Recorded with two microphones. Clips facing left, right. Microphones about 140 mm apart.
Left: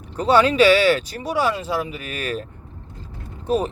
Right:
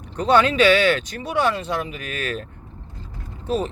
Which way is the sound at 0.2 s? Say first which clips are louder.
Left 1 dB; 10° left (ahead or behind).